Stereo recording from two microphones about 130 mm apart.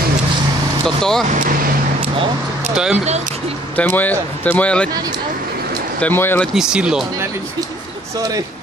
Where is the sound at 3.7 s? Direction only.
10° left (ahead or behind).